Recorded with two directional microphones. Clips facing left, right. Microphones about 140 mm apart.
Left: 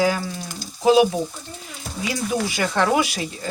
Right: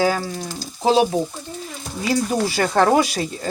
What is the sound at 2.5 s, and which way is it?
Speech, 35° right (ahead or behind).